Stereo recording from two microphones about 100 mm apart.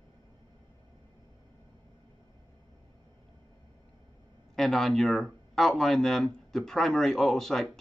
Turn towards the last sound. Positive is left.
turn(degrees=5)  # may be behind; listen again after turning